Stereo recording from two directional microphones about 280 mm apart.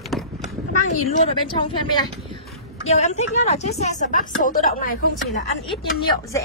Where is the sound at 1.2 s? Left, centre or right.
Centre.